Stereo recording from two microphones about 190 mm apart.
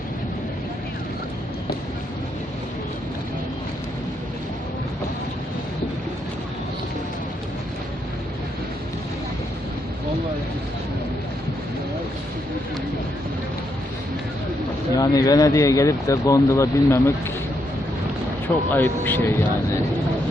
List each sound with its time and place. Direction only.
14.9 s speech: 20° left (ahead or behind)
18.7 s speech: 10° left (ahead or behind)